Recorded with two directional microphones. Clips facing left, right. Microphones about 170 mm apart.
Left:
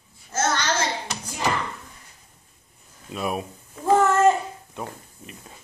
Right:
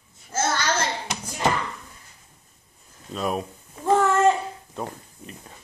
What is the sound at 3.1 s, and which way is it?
Cat, 5° left (ahead or behind).